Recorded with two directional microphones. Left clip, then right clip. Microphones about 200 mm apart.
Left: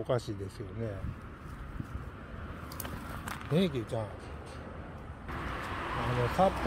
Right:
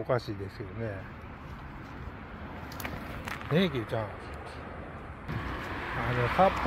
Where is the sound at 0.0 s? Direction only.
5° left (ahead or behind).